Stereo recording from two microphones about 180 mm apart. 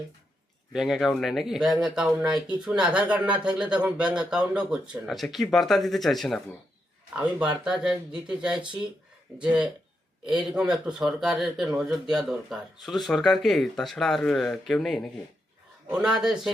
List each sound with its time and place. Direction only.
0.7 s speech: centre (ahead or behind)
10.2 s speech: 5° right (ahead or behind)